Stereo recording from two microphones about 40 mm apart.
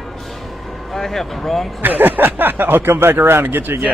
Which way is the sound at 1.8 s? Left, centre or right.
Right.